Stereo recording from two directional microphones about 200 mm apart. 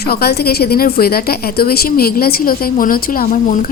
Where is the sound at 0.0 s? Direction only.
50° left (ahead or behind).